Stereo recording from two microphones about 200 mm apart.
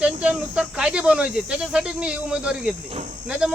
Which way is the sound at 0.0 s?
5° right (ahead or behind).